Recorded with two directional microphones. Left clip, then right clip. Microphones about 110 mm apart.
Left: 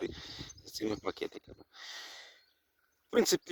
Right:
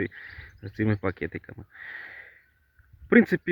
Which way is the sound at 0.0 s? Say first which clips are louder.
Right 7 dB; 40° left (ahead or behind).